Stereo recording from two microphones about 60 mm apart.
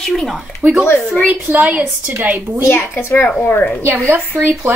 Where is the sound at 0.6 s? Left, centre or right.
Right.